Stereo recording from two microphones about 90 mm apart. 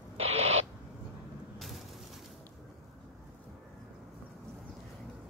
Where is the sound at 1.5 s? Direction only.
Centre (ahead or behind).